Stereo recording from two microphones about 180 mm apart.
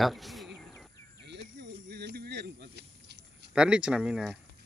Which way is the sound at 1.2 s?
70° right (ahead or behind).